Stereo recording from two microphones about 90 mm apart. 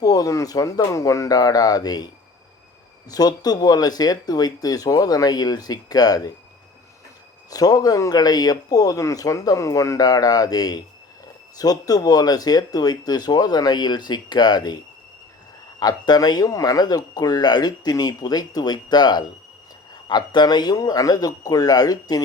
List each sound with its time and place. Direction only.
0.0 s speech: 45° left (ahead or behind)
3.1 s speech: 45° left (ahead or behind)
7.5 s speech: 45° left (ahead or behind)
15.8 s speech: 50° left (ahead or behind)